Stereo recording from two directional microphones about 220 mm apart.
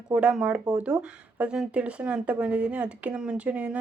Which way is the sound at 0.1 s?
5° right (ahead or behind).